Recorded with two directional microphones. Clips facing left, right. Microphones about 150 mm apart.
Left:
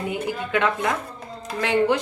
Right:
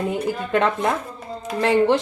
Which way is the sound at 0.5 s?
35° right (ahead or behind).